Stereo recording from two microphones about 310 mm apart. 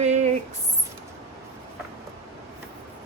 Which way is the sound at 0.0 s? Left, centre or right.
Right.